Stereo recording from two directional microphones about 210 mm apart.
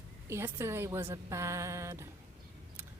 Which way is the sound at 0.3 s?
10° right (ahead or behind).